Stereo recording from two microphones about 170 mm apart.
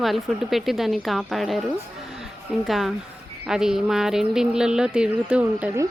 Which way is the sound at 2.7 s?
Centre (ahead or behind).